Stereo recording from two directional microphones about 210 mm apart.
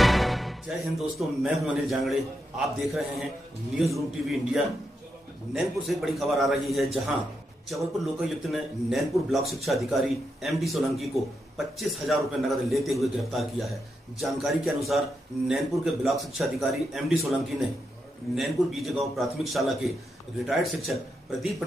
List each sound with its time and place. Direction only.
0.0 s a man's voice: centre (ahead or behind)